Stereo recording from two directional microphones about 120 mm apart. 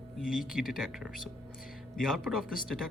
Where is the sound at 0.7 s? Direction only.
5° right (ahead or behind).